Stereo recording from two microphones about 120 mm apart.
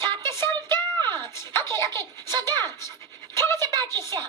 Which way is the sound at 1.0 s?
20° left (ahead or behind).